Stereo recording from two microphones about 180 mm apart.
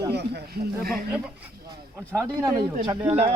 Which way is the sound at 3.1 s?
40° right (ahead or behind).